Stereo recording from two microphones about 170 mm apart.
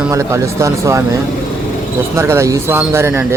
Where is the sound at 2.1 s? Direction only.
15° right (ahead or behind).